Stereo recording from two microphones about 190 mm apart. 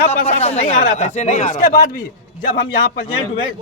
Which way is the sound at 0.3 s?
35° left (ahead or behind).